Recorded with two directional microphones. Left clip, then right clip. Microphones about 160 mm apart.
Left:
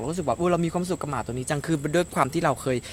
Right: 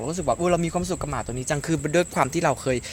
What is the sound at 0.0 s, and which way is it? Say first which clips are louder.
Speech: right 1 dB; 5° right (ahead or behind).